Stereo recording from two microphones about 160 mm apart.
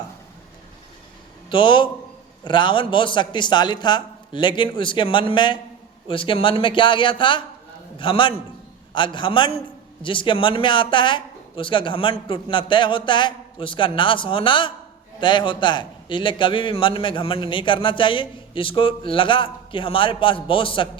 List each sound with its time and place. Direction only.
1.5 s a man's voice: 30° left (ahead or behind)